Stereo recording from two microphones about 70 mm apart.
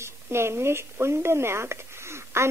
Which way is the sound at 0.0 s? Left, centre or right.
Right.